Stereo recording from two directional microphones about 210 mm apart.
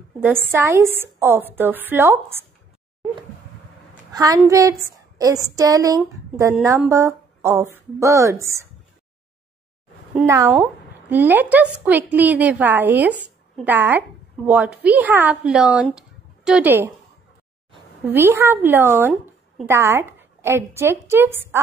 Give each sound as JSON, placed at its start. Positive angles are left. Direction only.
{"t": 0.2, "sound": "a woman's voice", "side_deg": -10}
{"t": 4.1, "sound": "a woman's voice", "side_deg": -15}
{"t": 5.1, "sound": "a sound", "side_deg": -15}
{"t": 5.6, "sound": "a woman's voice", "side_deg": -15}
{"t": 10.2, "sound": "a woman's voice", "side_deg": -15}
{"t": 18.0, "sound": "a woman's voice", "side_deg": -10}